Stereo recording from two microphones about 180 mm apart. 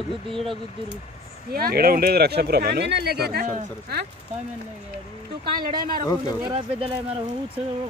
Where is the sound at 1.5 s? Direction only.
60° right (ahead or behind).